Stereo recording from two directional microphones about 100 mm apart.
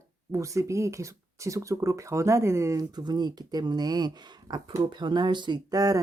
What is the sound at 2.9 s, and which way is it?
Speech, 45° right (ahead or behind).